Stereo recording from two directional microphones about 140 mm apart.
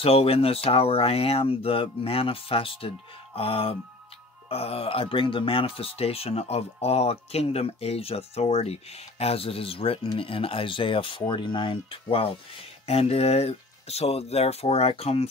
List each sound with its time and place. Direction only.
0.0 s speech: 45° left (ahead or behind)